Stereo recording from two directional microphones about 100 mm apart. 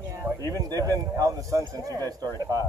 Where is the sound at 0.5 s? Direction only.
40° right (ahead or behind).